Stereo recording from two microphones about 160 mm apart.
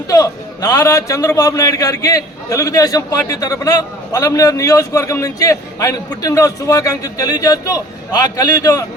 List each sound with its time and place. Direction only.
0.1 s a man's voice: 20° left (ahead or behind)